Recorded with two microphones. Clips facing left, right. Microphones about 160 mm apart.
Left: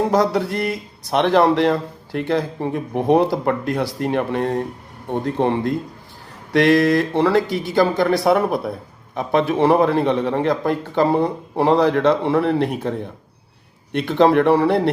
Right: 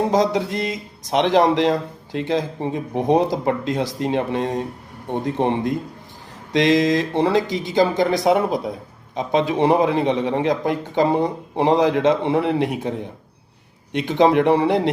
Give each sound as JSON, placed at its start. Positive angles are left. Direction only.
{"t": 0.1, "sound": "speech", "side_deg": -20}